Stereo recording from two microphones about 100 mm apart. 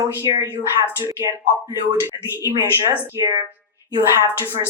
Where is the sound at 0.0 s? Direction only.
35° right (ahead or behind).